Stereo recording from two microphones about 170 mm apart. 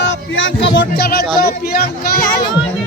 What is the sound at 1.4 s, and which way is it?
Speech, 65° left (ahead or behind).